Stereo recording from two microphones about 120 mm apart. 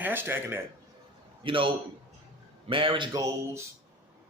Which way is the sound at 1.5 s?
45° right (ahead or behind).